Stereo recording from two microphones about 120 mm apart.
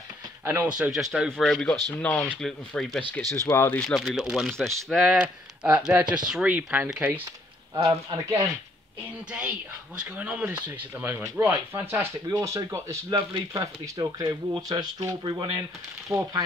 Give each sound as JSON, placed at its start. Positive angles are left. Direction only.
{"t": 0.5, "sound": "speech", "side_deg": -10}
{"t": 3.4, "sound": "speech", "side_deg": 20}
{"t": 3.8, "sound": "speech", "side_deg": 0}
{"t": 7.7, "sound": "speech", "side_deg": -30}
{"t": 9.3, "sound": "speech", "side_deg": -10}
{"t": 12.3, "sound": "speech", "side_deg": -30}